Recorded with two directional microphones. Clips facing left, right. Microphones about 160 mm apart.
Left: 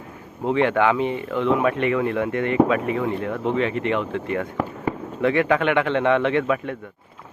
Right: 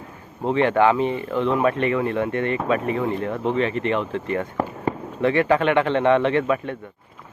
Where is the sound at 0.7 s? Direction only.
30° right (ahead or behind).